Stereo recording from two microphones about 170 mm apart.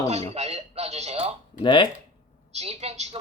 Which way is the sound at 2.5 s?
35° right (ahead or behind).